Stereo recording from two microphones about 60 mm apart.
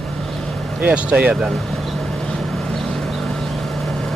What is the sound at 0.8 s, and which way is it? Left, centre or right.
Speech, right.